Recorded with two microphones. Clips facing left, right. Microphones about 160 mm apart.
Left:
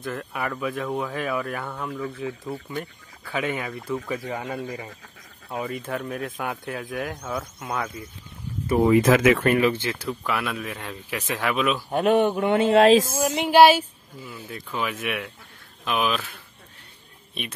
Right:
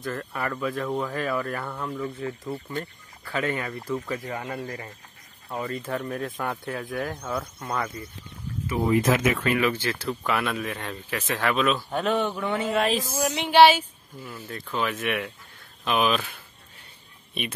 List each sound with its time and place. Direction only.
0.1 s speech: 5° left (ahead or behind)
4.3 s speech: 20° left (ahead or behind)
8.8 s speech: 90° left
9.6 s speech: 25° left (ahead or behind)
10.0 s speech: centre (ahead or behind)
12.8 s speech: 90° left
13.2 s speech: 50° left (ahead or behind)
13.5 s speech: 10° left (ahead or behind)
17.3 s speech: centre (ahead or behind)